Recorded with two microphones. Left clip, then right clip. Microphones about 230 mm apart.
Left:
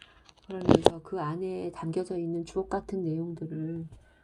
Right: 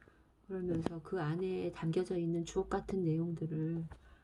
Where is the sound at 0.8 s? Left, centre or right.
Centre.